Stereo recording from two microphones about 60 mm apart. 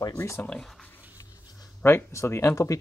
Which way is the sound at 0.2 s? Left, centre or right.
Left.